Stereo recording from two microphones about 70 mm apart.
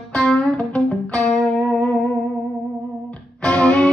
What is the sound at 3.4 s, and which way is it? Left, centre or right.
Music, centre.